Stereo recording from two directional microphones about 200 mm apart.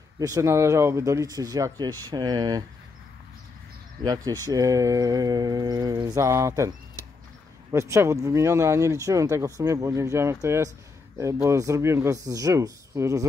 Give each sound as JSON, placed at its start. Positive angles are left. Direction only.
{"t": 0.2, "sound": "speech", "side_deg": -15}
{"t": 4.0, "sound": "speech", "side_deg": -20}
{"t": 7.7, "sound": "speech", "side_deg": -15}